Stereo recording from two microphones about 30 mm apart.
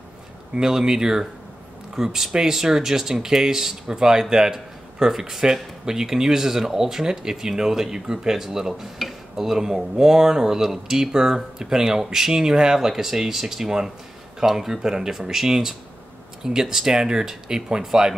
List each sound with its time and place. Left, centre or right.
0.6 s speech: centre
8.9 s a sound: centre
9.5 s speech: centre
14.7 s speech: centre